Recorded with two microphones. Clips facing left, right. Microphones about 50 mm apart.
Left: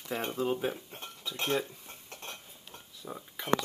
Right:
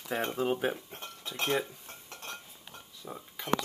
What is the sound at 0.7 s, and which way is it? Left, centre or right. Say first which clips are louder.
Speech: right 2 dB; centre.